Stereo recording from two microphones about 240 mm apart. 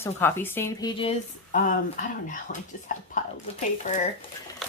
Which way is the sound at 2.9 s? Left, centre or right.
Left.